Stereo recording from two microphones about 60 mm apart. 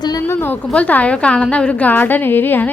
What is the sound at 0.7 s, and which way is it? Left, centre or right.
A woman's voice, left.